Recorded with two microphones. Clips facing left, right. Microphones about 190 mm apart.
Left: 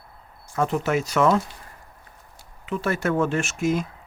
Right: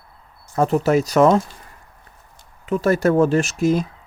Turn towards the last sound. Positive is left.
turn(degrees=-35)  # may be behind; listen again after turning